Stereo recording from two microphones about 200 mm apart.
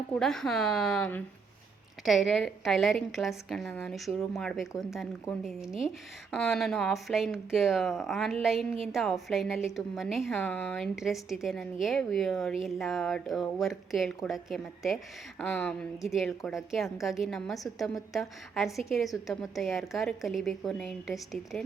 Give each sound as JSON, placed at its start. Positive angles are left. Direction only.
{"t": 0.1, "sound": "speech", "side_deg": 5}